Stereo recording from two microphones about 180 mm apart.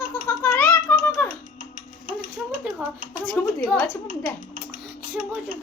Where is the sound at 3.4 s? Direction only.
10° left (ahead or behind).